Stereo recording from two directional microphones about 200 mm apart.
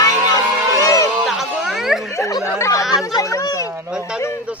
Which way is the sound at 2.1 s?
15° left (ahead or behind).